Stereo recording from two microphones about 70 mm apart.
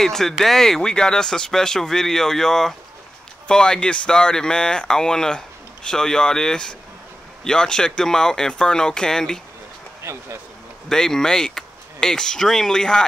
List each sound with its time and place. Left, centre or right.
0.0 s speech: centre
10.1 s speech: right
10.9 s speech: centre